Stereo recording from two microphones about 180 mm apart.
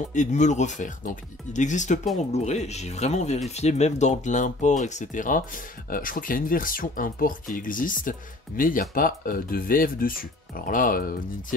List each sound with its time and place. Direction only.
0.1 s speech: 40° left (ahead or behind)